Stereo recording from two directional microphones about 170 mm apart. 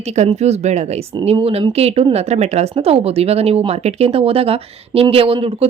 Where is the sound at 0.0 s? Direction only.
40° right (ahead or behind).